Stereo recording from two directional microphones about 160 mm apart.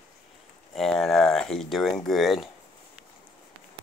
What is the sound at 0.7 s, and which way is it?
Speech, 5° left (ahead or behind).